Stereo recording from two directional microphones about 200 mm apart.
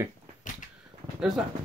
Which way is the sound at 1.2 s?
5° right (ahead or behind).